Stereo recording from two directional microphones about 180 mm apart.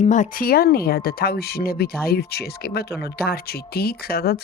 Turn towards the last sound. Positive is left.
turn(degrees=60)  # may be behind; listen again after turning